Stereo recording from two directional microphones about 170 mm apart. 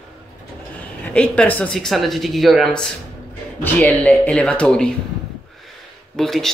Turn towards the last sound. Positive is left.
turn(degrees=0)  # may be behind; listen again after turning